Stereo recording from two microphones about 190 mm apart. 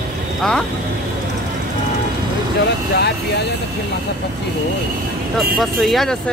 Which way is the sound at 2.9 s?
60° left (ahead or behind).